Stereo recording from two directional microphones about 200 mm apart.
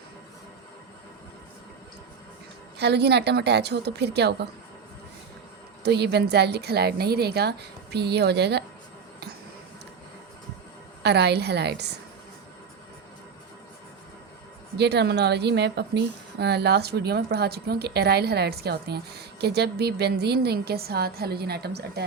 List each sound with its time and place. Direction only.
2.7 s a woman's voice: 55° right (ahead or behind)
5.8 s a woman's voice: 55° right (ahead or behind)
11.0 s a woman's voice: 55° right (ahead or behind)
14.8 s speech: 55° right (ahead or behind)